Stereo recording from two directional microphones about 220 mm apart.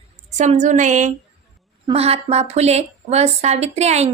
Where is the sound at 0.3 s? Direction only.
35° right (ahead or behind).